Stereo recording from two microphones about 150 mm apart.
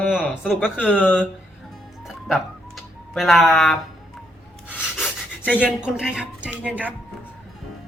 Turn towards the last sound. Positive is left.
turn(degrees=-10)  # may be behind; listen again after turning